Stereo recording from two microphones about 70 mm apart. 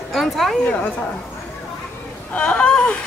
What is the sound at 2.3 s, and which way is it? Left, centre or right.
Speech, centre.